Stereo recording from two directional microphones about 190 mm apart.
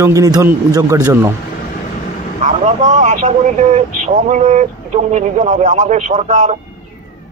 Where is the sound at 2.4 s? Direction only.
40° right (ahead or behind).